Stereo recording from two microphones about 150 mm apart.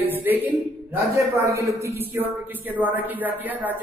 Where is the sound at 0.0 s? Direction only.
15° right (ahead or behind).